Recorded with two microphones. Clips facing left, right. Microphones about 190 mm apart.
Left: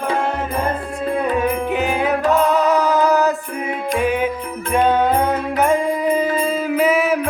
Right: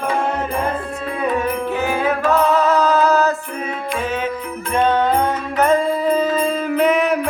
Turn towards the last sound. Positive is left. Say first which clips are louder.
# even
turn(degrees=5)  # may be behind; listen again after turning